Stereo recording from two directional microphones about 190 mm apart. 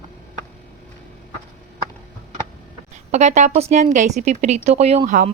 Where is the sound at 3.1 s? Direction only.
35° right (ahead or behind).